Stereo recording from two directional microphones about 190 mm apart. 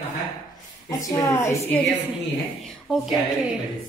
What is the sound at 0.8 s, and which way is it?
Speech, 20° left (ahead or behind).